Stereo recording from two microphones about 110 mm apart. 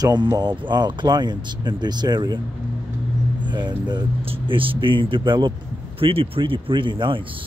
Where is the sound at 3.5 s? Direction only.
45° right (ahead or behind).